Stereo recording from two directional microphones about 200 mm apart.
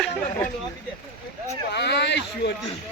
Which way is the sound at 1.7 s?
55° left (ahead or behind).